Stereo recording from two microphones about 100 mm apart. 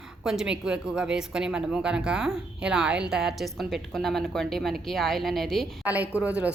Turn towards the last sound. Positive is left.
turn(degrees=-10)  # may be behind; listen again after turning